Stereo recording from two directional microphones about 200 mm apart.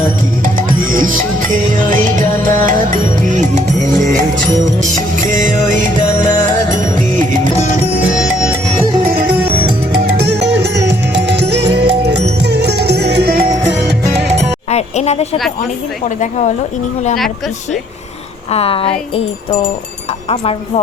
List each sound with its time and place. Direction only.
0.4 s music: 45° right (ahead or behind)
4.8 s music: 40° right (ahead or behind)
7.5 s music: 5° right (ahead or behind)
10.2 s music: 60° right (ahead or behind)
14.7 s speech: 35° left (ahead or behind)
18.5 s speech: 30° left (ahead or behind)
20.3 s speech: 30° left (ahead or behind)